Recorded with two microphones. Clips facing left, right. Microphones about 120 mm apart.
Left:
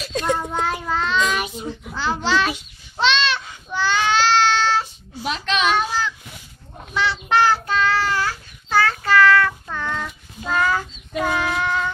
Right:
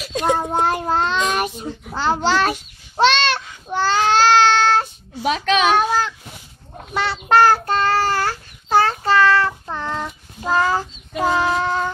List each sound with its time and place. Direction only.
0.0 s child singing: 15° right (ahead or behind)
0.4 s a child's voice: 40° right (ahead or behind)
0.7 s child singing: 55° right (ahead or behind)
3.6 s baby cry: 40° right (ahead or behind)
6.9 s child singing: 45° right (ahead or behind)